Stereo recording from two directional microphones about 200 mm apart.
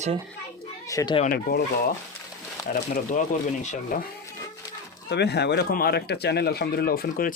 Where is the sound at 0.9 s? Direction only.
15° left (ahead or behind).